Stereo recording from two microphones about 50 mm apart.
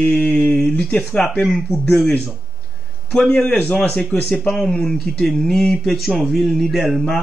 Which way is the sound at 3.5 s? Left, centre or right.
Left.